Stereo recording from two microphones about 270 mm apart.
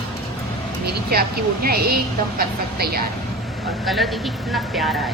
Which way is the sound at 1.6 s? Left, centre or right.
Right.